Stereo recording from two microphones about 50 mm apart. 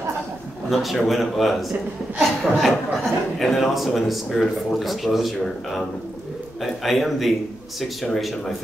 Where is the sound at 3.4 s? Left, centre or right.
Centre.